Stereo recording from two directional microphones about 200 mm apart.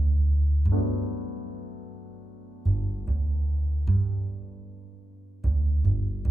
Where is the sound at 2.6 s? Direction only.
Centre (ahead or behind).